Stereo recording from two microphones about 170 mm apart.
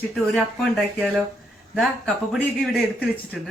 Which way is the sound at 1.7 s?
Centre (ahead or behind).